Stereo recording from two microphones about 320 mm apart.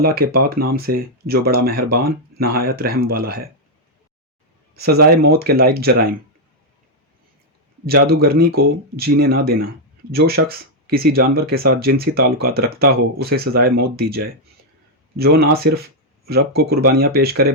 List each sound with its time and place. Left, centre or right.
0.0 s speech: right
4.7 s speech: right
8.0 s speech: right
9.1 s speech: right
9.4 s speech: right